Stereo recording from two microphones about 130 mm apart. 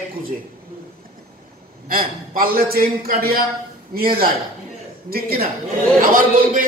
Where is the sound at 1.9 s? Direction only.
90° right.